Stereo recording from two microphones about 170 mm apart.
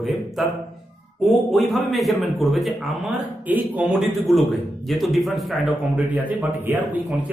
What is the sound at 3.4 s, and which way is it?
A man's voice, 10° right (ahead or behind).